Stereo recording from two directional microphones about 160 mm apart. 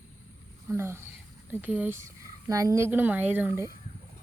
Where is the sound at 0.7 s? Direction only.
15° right (ahead or behind).